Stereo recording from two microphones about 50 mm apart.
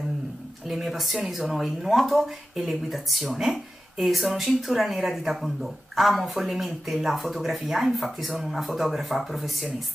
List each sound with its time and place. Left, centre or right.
0.7 s speech: centre